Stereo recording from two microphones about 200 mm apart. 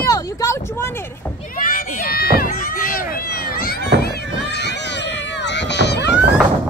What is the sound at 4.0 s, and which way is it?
Run, 50° left (ahead or behind).